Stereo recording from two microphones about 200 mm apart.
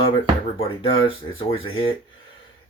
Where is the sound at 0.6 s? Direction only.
25° left (ahead or behind).